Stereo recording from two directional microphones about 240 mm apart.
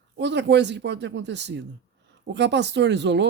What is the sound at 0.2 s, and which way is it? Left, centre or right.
Speech, right.